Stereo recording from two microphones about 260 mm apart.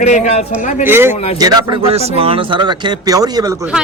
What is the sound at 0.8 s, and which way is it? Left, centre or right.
A woman's voice, centre.